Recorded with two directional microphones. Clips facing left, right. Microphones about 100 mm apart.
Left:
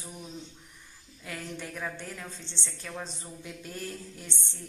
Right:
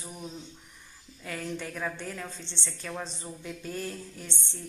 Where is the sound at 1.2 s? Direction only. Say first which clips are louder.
Right 3 dB; 5° left (ahead or behind).